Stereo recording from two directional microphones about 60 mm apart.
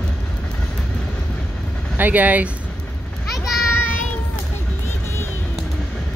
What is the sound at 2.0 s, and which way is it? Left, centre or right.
Speech, right.